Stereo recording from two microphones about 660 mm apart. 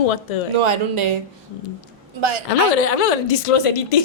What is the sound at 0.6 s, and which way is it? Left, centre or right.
Speech, right.